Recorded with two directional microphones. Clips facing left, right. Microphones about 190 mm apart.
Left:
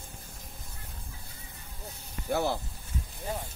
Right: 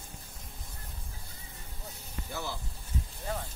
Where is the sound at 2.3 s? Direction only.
60° left (ahead or behind).